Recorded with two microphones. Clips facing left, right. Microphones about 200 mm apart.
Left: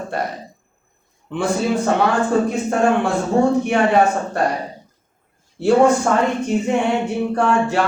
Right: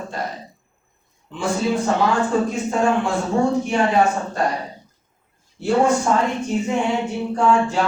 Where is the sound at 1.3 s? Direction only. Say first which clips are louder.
Left 2 dB; 60° left (ahead or behind).